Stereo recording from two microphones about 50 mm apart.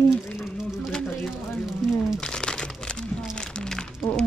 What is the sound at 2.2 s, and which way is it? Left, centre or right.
Crumpling, centre.